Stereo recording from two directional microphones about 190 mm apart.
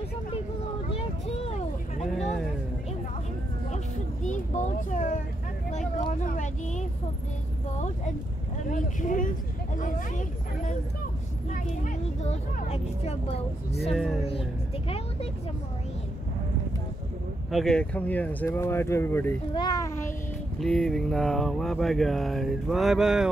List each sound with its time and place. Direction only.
0.8 s vehicle: 30° left (ahead or behind)
3.7 s vehicle: 40° left (ahead or behind)
5.7 s speech: 40° left (ahead or behind)
9.8 s a sound: 45° left (ahead or behind)
11.5 s speech: 40° left (ahead or behind)
13.9 s speech: centre (ahead or behind)
17.5 s speech: centre (ahead or behind)
19.5 s a child's voice: 25° left (ahead or behind)
20.5 s speech: centre (ahead or behind)